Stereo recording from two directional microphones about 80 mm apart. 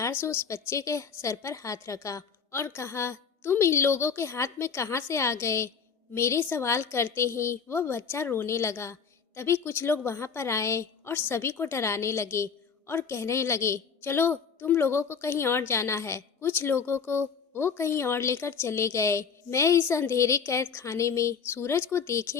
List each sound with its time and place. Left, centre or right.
0.0 s a woman's voice: left